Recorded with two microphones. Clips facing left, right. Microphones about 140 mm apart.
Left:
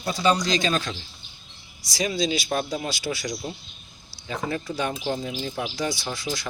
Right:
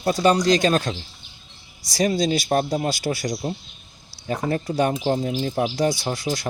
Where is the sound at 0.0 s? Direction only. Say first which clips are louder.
Right 5 dB; 50° right (ahead or behind).